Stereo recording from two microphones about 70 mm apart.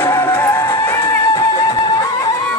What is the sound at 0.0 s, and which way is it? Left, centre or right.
Music, left.